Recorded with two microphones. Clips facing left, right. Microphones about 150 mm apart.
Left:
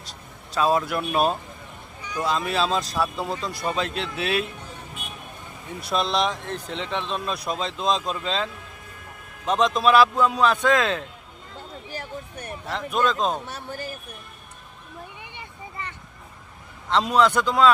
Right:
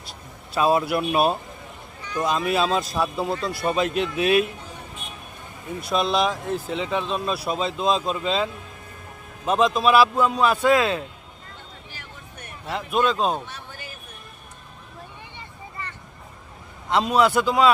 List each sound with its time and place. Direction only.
0.5 s a man's voice: 10° right (ahead or behind)
5.8 s speech: centre (ahead or behind)
9.5 s a man's voice: 5° right (ahead or behind)
11.9 s vehicle: 40° left (ahead or behind)
12.7 s a man's voice: 10° right (ahead or behind)
13.5 s speech: 40° left (ahead or behind)
15.2 s a sound: 15° left (ahead or behind)
17.0 s a man's voice: 5° right (ahead or behind)